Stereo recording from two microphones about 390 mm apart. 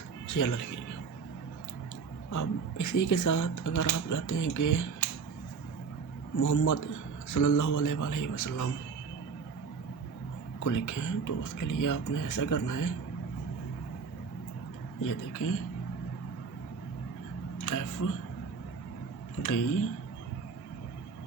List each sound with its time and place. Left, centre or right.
0.3 s speech: left
2.3 s speech: left
6.4 s speech: left
10.6 s speech: left
15.0 s speech: left
17.7 s speech: left
19.4 s speech: left